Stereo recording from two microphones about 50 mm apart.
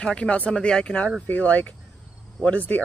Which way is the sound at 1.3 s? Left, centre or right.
Left.